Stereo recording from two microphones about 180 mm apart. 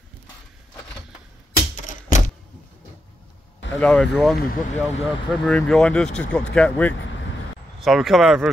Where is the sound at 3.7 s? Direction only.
5° left (ahead or behind).